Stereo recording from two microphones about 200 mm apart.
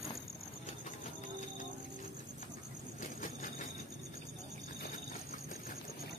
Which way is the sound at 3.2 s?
40° left (ahead or behind).